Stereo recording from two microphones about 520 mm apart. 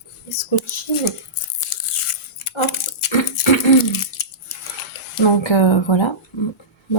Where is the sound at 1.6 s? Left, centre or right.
Left.